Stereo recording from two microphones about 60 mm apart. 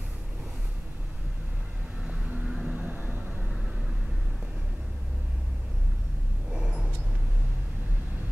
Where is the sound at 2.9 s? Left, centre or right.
Right.